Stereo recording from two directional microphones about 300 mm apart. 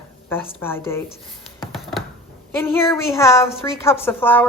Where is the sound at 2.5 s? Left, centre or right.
Centre.